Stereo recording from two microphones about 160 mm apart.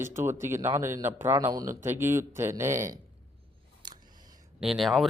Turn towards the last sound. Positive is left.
turn(degrees=0)  # may be behind; listen again after turning